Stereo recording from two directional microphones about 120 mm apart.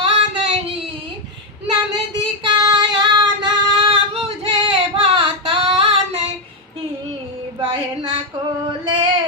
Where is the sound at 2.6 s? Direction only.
40° right (ahead or behind).